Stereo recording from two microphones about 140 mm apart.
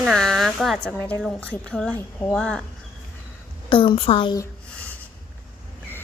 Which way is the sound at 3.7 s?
40° left (ahead or behind).